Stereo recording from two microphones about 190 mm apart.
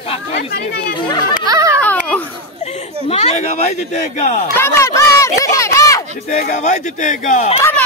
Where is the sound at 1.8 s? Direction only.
10° left (ahead or behind).